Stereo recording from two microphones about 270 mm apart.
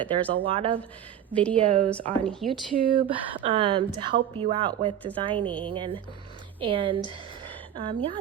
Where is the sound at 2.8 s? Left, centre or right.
Centre.